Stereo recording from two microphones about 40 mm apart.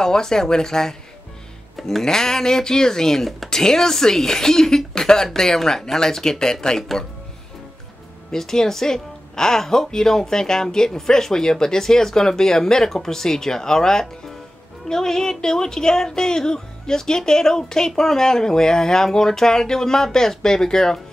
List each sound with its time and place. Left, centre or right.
0.0 s a woman's voice: centre
8.3 s a woman's voice: centre